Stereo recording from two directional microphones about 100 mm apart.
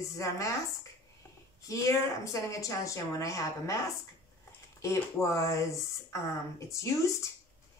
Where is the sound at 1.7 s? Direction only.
30° left (ahead or behind).